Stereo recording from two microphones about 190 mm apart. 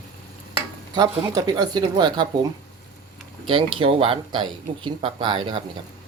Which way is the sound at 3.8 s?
30° right (ahead or behind).